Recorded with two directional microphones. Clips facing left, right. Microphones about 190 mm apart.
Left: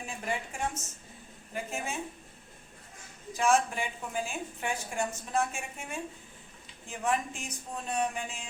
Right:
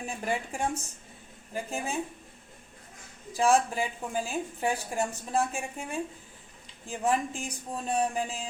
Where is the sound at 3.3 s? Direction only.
35° right (ahead or behind).